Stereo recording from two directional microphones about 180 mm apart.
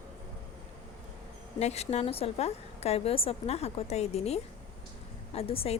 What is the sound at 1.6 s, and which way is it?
A woman's voice, 35° left (ahead or behind).